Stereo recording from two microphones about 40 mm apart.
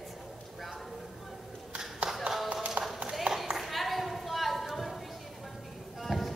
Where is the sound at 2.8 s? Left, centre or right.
Right.